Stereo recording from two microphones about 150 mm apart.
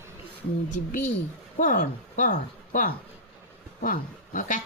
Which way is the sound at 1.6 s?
60° left (ahead or behind).